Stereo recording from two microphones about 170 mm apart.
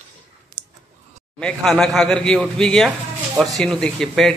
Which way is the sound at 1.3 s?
5° left (ahead or behind).